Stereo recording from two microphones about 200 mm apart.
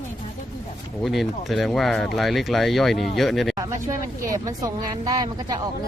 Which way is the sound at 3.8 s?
15° right (ahead or behind).